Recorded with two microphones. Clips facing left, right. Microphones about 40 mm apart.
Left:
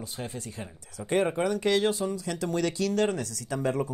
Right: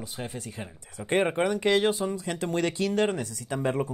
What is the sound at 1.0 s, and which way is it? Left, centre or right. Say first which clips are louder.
Speech: right 1 dB; right.